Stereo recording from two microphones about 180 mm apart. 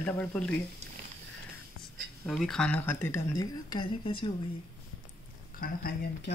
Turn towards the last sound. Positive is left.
turn(degrees=55)  # may be behind; listen again after turning